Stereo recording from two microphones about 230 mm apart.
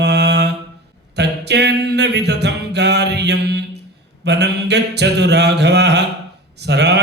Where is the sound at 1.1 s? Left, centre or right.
Right.